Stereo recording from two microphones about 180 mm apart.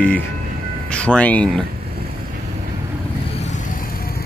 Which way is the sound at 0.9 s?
5° left (ahead or behind).